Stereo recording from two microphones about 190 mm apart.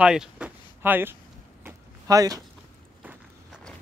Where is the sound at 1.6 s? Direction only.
20° right (ahead or behind).